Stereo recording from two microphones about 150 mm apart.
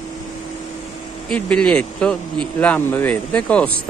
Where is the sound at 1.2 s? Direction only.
5° left (ahead or behind).